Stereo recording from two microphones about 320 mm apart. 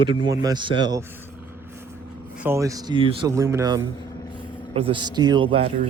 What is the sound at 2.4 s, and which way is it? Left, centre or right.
A man's voice, centre.